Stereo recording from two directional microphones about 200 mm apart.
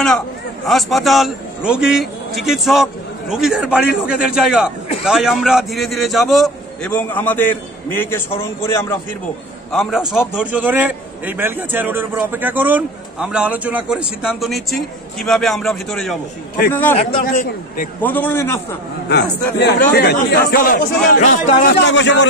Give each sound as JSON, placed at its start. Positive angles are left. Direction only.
{"t": 0.7, "sound": "a man's voice", "side_deg": 0}
{"t": 9.7, "sound": "a man's voice", "side_deg": 0}
{"t": 17.2, "sound": "a man's voice", "side_deg": 45}
{"t": 18.0, "sound": "a man's voice", "side_deg": 10}
{"t": 19.6, "sound": "a man's voice", "side_deg": 50}
{"t": 21.3, "sound": "a man's voice", "side_deg": 60}